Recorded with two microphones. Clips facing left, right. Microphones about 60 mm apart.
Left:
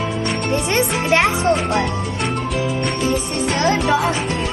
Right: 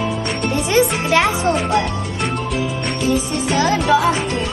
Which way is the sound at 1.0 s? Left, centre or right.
Left.